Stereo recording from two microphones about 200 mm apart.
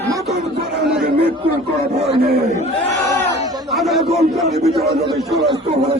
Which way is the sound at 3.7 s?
Centre (ahead or behind).